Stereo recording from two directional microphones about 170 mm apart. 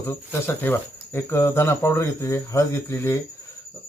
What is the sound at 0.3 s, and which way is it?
Speech, 15° left (ahead or behind).